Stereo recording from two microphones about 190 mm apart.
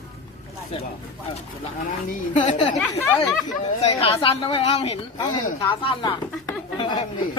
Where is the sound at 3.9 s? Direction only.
30° left (ahead or behind).